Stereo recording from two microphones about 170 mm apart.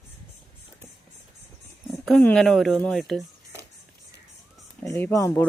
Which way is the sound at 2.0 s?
5° left (ahead or behind).